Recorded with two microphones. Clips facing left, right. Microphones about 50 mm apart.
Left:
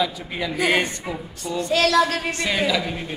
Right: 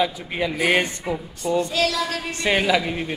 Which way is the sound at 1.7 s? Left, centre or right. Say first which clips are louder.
Left 5 dB; left.